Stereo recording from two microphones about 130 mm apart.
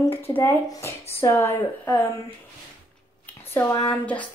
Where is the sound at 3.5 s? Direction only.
15° left (ahead or behind).